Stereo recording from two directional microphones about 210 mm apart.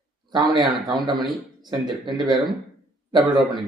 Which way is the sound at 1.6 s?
20° right (ahead or behind).